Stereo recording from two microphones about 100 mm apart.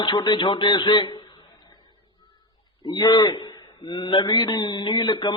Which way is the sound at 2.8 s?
45° left (ahead or behind).